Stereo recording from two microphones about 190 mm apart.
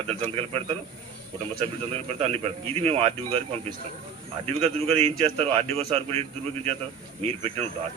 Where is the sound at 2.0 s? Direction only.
35° right (ahead or behind).